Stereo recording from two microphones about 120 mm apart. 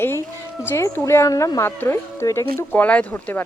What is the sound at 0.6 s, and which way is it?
Speech, 20° left (ahead or behind).